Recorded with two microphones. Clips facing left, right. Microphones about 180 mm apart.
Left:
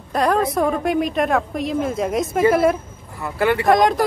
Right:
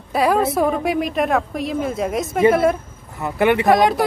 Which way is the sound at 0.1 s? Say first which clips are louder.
Right 1 dB; 5° right (ahead or behind).